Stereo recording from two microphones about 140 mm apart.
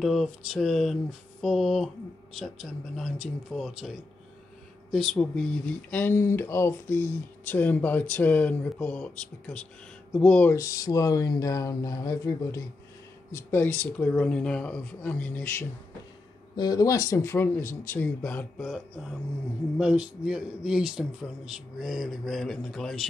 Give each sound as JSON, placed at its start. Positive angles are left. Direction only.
{"t": 0.0, "sound": "a man's voice", "side_deg": 0}
{"t": 4.9, "sound": "speech", "side_deg": 0}
{"t": 10.5, "sound": "speech", "side_deg": 25}
{"t": 16.5, "sound": "speech", "side_deg": 25}
{"t": 18.6, "sound": "a man's voice", "side_deg": -5}